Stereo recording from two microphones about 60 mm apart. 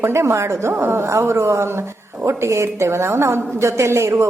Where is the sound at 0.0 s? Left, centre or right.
Right.